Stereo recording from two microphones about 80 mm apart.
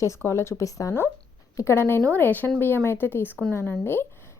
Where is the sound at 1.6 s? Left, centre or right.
Left.